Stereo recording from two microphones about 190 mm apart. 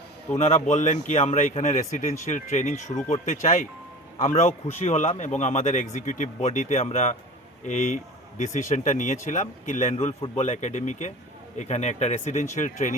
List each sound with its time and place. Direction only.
0.3 s a man's voice: 35° left (ahead or behind)